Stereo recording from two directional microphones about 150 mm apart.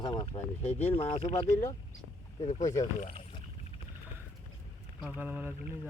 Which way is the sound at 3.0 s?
50° left (ahead or behind).